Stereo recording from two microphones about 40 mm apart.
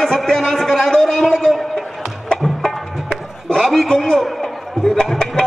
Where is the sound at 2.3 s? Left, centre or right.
Centre.